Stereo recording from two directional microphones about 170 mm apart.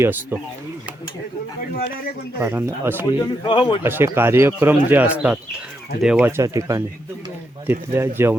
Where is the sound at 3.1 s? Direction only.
25° left (ahead or behind).